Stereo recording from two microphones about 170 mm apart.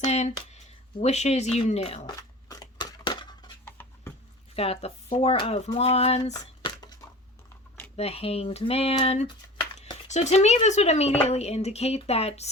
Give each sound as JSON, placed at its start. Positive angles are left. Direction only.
{"t": 0.0, "sound": "speech", "side_deg": 40}
{"t": 2.5, "sound": "scissors", "side_deg": 25}
{"t": 3.7, "sound": "a sound", "side_deg": 10}
{"t": 4.5, "sound": "speech", "side_deg": 35}
{"t": 6.3, "sound": "a sound", "side_deg": 25}
{"t": 7.9, "sound": "speech", "side_deg": 35}